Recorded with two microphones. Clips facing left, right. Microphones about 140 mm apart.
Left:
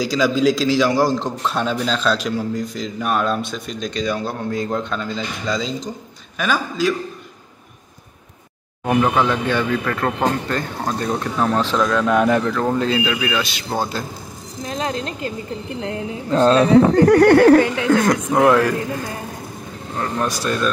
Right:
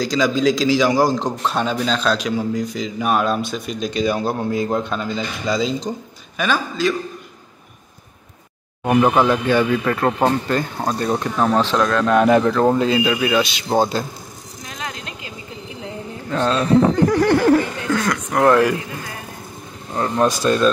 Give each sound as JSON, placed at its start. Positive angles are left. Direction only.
{"t": 0.0, "sound": "a man's voice", "side_deg": 5}
{"t": 6.3, "sound": "a man's voice", "side_deg": 5}
{"t": 8.8, "sound": "a man's voice", "side_deg": -10}
{"t": 12.3, "sound": "speech", "side_deg": -30}
{"t": 12.7, "sound": "a man's voice", "side_deg": -10}
{"t": 13.7, "sound": "speech", "side_deg": -25}
{"t": 14.6, "sound": "a sound", "side_deg": 30}
{"t": 16.3, "sound": "speech", "side_deg": 35}
{"t": 16.7, "sound": "speech", "side_deg": 70}
{"t": 17.9, "sound": "speech", "side_deg": 45}
{"t": 20.0, "sound": "speech", "side_deg": -25}